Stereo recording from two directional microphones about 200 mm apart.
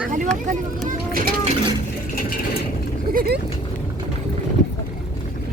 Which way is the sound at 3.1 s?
45° right (ahead or behind).